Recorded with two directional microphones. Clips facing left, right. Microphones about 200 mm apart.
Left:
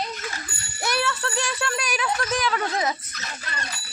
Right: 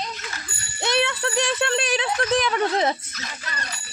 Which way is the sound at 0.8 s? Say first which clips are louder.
Right 3 dB; 20° right (ahead or behind).